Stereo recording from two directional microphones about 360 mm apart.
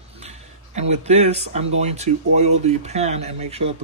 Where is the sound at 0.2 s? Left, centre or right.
Centre.